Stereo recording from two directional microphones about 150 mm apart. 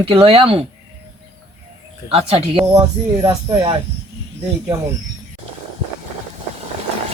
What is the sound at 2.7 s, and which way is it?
Speech, 25° right (ahead or behind).